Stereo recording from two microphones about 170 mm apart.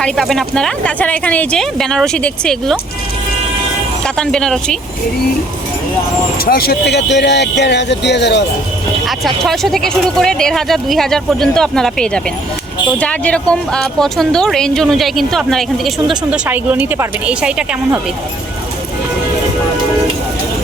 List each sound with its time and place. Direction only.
0.0 s speech: centre (ahead or behind)
4.0 s speech: 5° left (ahead or behind)
6.4 s speech: 65° left (ahead or behind); by 8.4 s 90° left
9.0 s speech: centre (ahead or behind)